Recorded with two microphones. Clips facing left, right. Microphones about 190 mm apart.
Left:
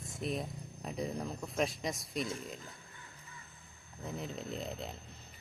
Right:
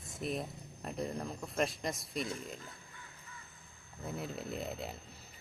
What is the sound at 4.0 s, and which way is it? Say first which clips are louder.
Speech: even; 5° right (ahead or behind).